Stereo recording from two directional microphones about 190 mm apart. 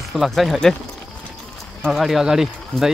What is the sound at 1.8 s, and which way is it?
Speech, centre (ahead or behind).